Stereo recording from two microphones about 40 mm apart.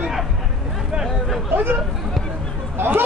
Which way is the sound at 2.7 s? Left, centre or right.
Right.